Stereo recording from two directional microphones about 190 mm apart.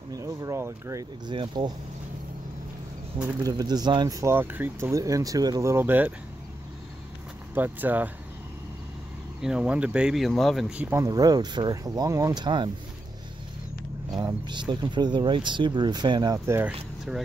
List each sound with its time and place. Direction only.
0.1 s speech: 15° right (ahead or behind)
3.2 s speech: 10° right (ahead or behind)
7.5 s speech: 10° right (ahead or behind)
9.4 s speech: 5° right (ahead or behind); by 12.7 s 25° right (ahead or behind)
14.1 s speech: 20° right (ahead or behind)